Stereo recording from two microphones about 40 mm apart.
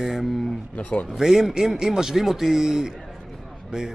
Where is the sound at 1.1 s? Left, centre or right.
Centre.